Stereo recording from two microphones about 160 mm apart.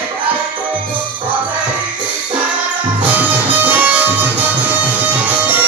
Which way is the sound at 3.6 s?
10° right (ahead or behind).